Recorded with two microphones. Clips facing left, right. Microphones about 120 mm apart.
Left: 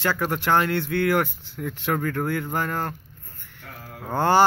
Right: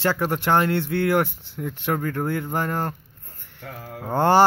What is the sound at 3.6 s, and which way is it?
Mantra, 25° right (ahead or behind).